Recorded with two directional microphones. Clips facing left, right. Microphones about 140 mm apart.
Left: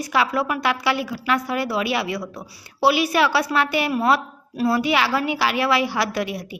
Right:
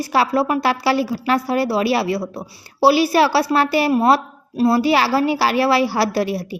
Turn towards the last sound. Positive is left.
turn(degrees=-35)  # may be behind; listen again after turning